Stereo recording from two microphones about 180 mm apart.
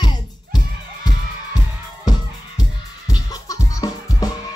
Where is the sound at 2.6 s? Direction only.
20° left (ahead or behind).